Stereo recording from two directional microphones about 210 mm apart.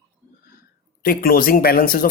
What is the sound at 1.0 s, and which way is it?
Speech, 45° left (ahead or behind).